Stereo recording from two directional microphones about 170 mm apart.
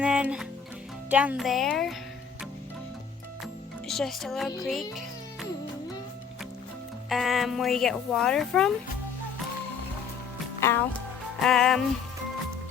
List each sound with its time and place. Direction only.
0.0 s music: 5° right (ahead or behind)
1.1 s speech: 10° right (ahead or behind)
3.4 s music: centre (ahead or behind)
4.6 s speech: centre (ahead or behind)
7.1 s speech: centre (ahead or behind)
10.6 s speech: 15° left (ahead or behind)
11.3 s speech: centre (ahead or behind)